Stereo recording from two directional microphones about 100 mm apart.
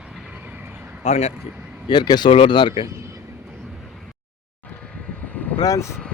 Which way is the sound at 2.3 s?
60° left (ahead or behind).